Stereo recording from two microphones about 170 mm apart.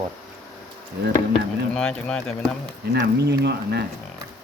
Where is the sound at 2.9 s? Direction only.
80° right.